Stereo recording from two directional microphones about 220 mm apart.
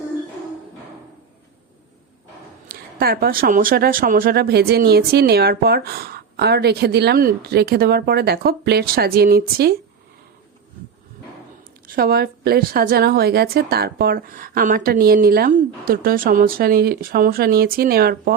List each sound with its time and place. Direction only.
2.6 s speech: 40° right (ahead or behind)
11.9 s speech: 45° right (ahead or behind)